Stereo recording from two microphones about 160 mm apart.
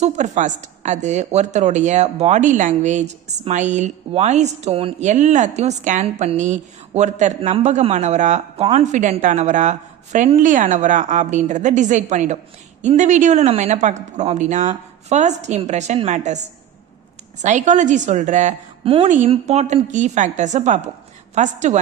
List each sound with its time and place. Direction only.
0.0 s a woman's voice: 50° right (ahead or behind)
5.0 s a woman's voice: 50° right (ahead or behind)